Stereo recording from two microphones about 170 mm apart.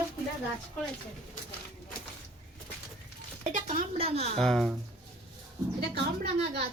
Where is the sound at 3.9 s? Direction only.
35° right (ahead or behind).